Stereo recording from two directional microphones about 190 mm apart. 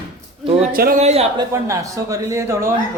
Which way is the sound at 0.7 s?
50° right (ahead or behind).